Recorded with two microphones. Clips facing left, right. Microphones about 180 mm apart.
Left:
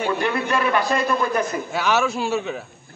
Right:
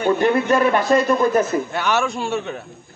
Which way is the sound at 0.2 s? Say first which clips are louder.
Right 6 dB; 40° right (ahead or behind).